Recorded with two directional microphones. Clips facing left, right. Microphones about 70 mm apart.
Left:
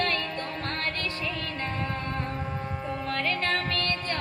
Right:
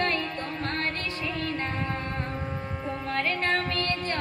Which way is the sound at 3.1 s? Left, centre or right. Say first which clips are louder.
Right 2 dB; right.